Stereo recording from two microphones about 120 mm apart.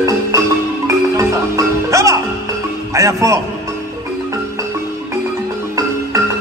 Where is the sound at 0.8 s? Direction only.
25° right (ahead or behind).